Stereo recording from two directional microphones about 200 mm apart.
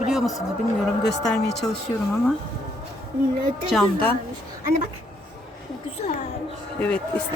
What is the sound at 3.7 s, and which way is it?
Speech, centre (ahead or behind).